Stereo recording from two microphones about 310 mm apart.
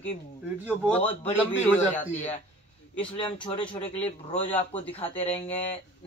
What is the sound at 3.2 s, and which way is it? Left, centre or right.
Speech, centre.